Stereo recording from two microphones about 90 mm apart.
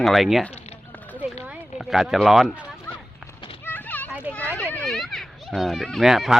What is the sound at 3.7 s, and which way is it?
Children playing, 20° left (ahead or behind).